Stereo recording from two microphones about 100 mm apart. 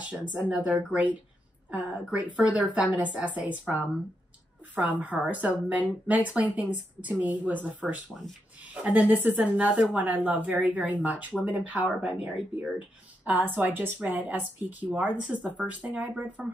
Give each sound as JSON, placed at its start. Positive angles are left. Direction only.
{"t": 0.2, "sound": "a woman's voice", "side_deg": -10}
{"t": 1.7, "sound": "a woman's voice", "side_deg": -15}
{"t": 4.7, "sound": "a woman's voice", "side_deg": -15}